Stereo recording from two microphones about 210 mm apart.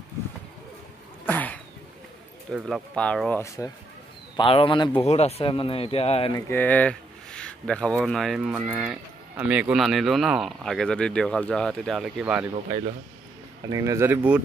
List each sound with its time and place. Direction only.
1.2 s a sound: 5° left (ahead or behind)
2.5 s speech: centre (ahead or behind)
4.4 s speech: 25° left (ahead or behind)
6.3 s speech: 10° left (ahead or behind)
13.7 s speech: 15° right (ahead or behind)